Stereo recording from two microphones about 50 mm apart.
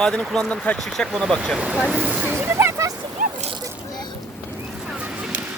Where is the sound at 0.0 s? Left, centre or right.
Centre.